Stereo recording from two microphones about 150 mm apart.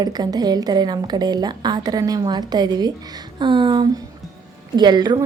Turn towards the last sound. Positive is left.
turn(degrees=-30)  # may be behind; listen again after turning